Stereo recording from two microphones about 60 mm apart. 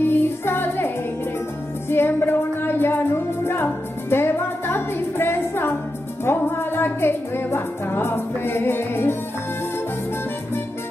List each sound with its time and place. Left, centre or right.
0.0 s music: left